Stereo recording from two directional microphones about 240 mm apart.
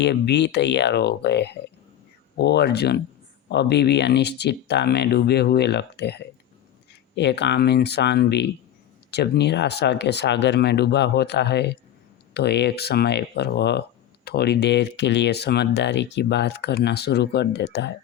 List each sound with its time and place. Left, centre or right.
0.0 s speech: left